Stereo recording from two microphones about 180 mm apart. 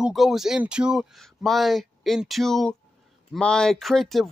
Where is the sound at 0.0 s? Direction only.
Centre (ahead or behind).